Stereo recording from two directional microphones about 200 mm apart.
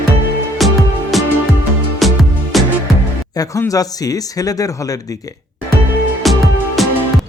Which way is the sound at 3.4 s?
15° left (ahead or behind).